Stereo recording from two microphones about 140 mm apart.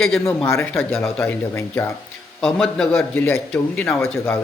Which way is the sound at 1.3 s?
15° left (ahead or behind).